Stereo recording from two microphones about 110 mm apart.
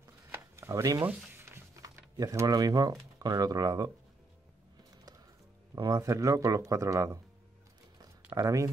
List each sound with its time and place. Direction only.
0.3 s a sound: 25° right (ahead or behind)
1.8 s speech: 30° right (ahead or behind)
5.8 s speech: 35° right (ahead or behind)
8.4 s speech: 30° right (ahead or behind)